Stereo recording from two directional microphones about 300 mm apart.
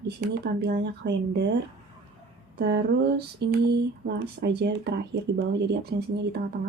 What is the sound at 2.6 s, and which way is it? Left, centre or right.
Speech, right.